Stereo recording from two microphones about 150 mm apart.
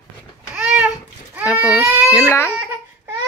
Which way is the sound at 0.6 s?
5° right (ahead or behind).